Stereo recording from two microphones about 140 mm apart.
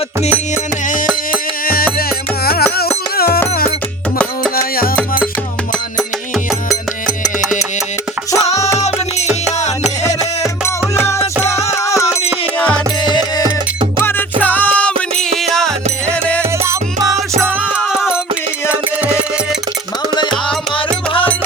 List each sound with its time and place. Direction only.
1.6 s music: 90° left
8.5 s music: 20° left (ahead or behind)
10.9 s music: 20° left (ahead or behind)
14.0 s music: 15° left (ahead or behind)
16.4 s music: 20° right (ahead or behind); by 18.2 s 5° right (ahead or behind)